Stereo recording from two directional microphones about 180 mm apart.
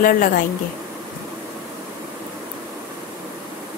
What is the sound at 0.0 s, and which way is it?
Speech, 50° left (ahead or behind).